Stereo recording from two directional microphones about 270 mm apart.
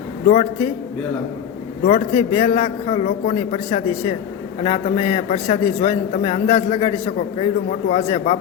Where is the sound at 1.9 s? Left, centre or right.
Left.